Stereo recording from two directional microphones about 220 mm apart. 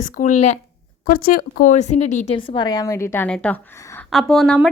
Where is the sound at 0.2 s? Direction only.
35° left (ahead or behind).